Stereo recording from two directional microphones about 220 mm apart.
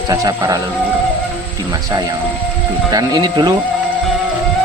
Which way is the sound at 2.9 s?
20° right (ahead or behind).